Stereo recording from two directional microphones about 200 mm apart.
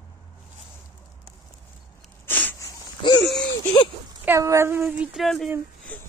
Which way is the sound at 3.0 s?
25° left (ahead or behind).